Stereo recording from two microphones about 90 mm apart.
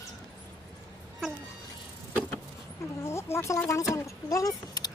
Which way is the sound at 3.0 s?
30° left (ahead or behind).